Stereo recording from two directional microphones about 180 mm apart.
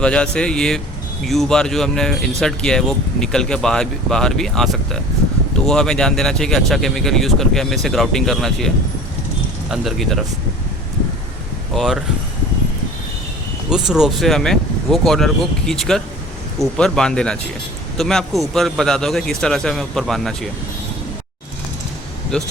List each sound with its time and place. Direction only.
0.0 s speech: 5° left (ahead or behind)
11.7 s speech: centre (ahead or behind)
13.7 s speech: 5° right (ahead or behind)